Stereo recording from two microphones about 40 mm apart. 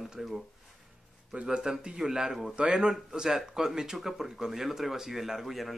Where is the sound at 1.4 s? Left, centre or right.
Centre.